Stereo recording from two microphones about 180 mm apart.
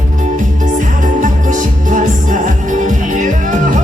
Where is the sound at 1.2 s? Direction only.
45° right (ahead or behind).